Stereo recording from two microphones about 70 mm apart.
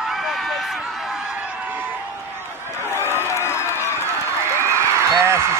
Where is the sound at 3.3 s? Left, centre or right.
Left.